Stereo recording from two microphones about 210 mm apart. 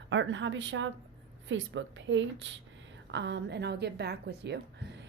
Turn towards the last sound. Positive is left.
turn(degrees=-55)  # may be behind; listen again after turning